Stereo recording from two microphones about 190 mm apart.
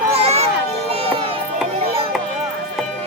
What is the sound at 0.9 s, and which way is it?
Music, 30° right (ahead or behind).